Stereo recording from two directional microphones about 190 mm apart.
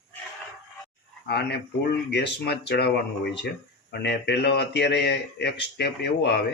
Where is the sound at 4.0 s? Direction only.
60° left (ahead or behind).